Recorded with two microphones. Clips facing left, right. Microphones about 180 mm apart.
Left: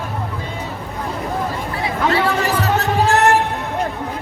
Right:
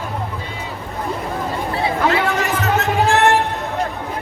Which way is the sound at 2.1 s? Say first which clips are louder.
Left 1 dB; 35° left (ahead or behind).